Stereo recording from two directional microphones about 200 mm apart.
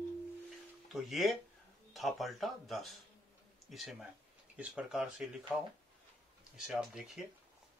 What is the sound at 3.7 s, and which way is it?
Speech, centre (ahead or behind).